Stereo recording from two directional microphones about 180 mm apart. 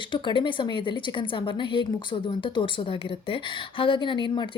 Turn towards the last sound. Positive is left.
turn(degrees=25)  # may be behind; listen again after turning